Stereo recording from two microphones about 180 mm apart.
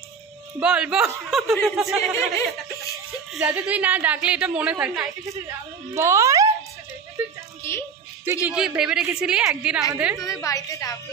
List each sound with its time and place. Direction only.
0.6 s a woman's voice: 5° right (ahead or behind)
2.0 s speech: 15° left (ahead or behind)
3.3 s a woman's voice: 5° right (ahead or behind)
5.9 s a child's voice: 15° right (ahead or behind)
8.5 s a woman's voice: 5° right (ahead or behind)
10.2 s a woman's voice: 20° left (ahead or behind)